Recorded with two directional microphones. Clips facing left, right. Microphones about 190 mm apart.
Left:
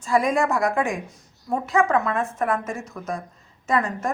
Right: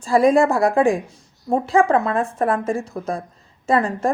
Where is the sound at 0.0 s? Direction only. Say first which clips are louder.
Right 6 dB; 30° right (ahead or behind).